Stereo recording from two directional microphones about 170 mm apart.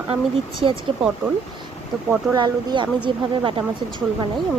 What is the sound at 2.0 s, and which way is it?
Speech, 25° right (ahead or behind).